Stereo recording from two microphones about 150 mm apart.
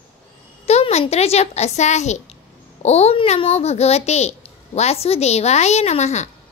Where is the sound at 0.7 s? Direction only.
45° left (ahead or behind).